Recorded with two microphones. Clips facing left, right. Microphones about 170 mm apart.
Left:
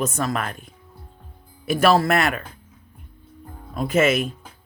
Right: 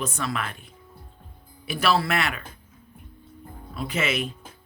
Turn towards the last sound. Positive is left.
turn(degrees=45)  # may be behind; listen again after turning